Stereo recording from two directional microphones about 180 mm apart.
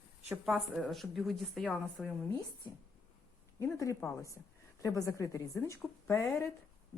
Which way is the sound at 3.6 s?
15° left (ahead or behind).